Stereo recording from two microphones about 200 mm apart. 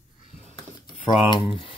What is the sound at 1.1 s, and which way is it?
Speech, 25° left (ahead or behind).